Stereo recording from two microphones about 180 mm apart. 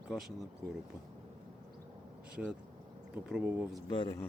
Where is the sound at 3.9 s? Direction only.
25° left (ahead or behind).